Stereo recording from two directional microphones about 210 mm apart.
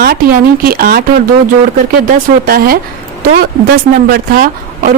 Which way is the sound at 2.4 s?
45° right (ahead or behind).